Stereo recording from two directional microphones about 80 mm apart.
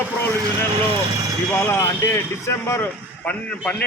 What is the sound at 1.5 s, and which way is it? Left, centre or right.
Speech, left.